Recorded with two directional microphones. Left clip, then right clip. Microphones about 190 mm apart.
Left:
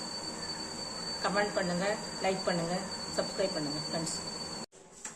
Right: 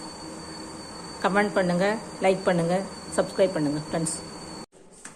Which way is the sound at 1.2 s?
35° right (ahead or behind).